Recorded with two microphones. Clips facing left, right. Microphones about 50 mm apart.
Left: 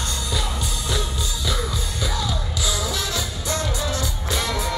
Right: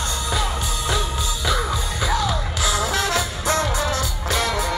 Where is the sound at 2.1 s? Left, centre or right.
Right.